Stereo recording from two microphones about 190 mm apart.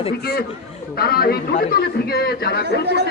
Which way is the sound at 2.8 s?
60° right (ahead or behind).